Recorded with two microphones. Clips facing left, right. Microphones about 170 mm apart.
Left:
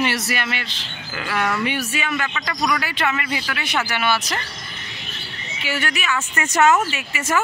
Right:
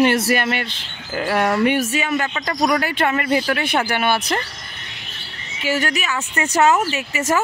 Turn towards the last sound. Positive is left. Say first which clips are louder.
# right 3 dB
turn(degrees=-40)  # may be behind; listen again after turning